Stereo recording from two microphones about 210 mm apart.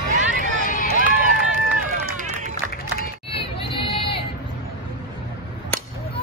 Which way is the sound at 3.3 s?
25° left (ahead or behind).